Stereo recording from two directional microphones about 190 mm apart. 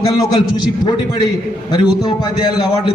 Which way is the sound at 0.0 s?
25° left (ahead or behind).